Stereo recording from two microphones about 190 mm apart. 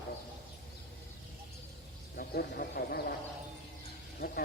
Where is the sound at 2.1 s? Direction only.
55° left (ahead or behind).